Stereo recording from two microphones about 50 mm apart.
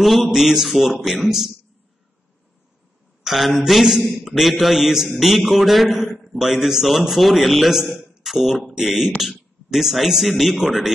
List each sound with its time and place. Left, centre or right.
0.0 s a man's voice: centre
3.3 s a man's voice: centre
8.0 s a sound: centre
8.3 s a man's voice: centre